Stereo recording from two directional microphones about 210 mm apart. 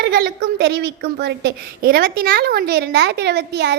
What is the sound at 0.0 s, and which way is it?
A woman's voice, 50° right (ahead or behind).